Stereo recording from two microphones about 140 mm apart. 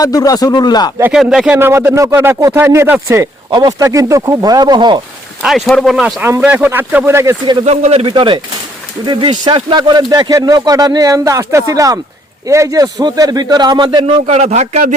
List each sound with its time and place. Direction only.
0.0 s speech: 25° left (ahead or behind)
1.1 s speech: 5° right (ahead or behind)
1.5 s speech: 15° right (ahead or behind); by 4.9 s 30° right (ahead or behind)
5.4 s speech: centre (ahead or behind)
6.2 s speech: 15° right (ahead or behind)
7.6 s speech: 50° right (ahead or behind); by 14.2 s 35° right (ahead or behind)
14.3 s speech: 55° right (ahead or behind)